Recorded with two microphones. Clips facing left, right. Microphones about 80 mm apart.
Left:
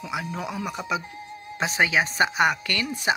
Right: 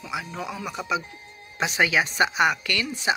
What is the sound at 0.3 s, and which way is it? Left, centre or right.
Speech, centre.